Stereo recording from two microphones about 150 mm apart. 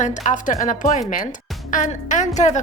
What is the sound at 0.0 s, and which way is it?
A woman's voice, 55° left (ahead or behind).